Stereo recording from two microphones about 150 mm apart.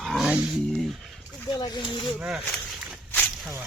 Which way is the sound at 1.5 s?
30° left (ahead or behind).